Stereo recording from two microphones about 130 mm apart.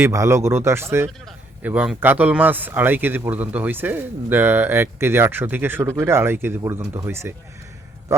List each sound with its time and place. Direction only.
0.0 s speech: 20° right (ahead or behind)